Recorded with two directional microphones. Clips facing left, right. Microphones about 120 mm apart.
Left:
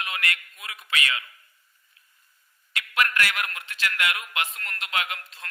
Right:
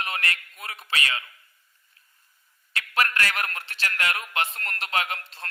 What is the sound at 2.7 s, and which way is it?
A man's voice, 35° right (ahead or behind).